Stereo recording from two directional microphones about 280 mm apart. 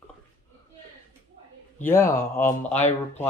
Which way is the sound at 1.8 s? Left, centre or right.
Centre.